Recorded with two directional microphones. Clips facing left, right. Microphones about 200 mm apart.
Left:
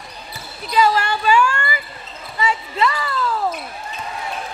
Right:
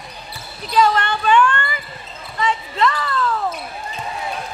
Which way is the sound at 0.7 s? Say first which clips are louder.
Even; 5° left (ahead or behind).